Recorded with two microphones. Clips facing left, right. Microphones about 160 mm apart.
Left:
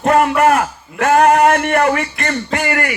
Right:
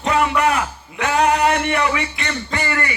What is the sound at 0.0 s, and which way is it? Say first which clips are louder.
A man's voice: left 5 dB; 55° left (ahead or behind).